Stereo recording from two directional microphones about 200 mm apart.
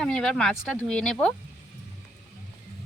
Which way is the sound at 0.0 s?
Centre (ahead or behind).